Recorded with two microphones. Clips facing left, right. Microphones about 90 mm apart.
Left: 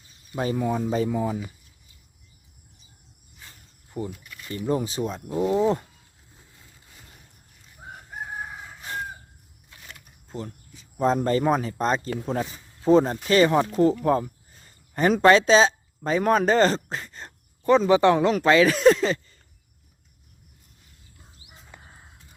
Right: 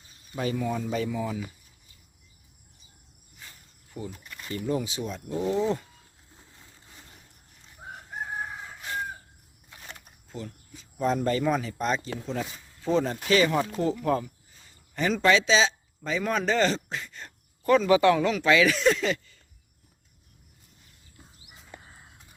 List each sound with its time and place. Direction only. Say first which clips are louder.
0.3 s speech: left 4 dB; 35° left (ahead or behind)
4.1 s a sound: left 1 dB; 30° right (ahead or behind)
4.5 s speech: left 3 dB; 35° left (ahead or behind)
7.8 s crowing: even; centre (ahead or behind)
8.2 s chicken: even; centre (ahead or behind)
10.2 s speech: left 4 dB; 35° left (ahead or behind)
14.5 s a man's voice: left 6 dB; 45° left (ahead or behind)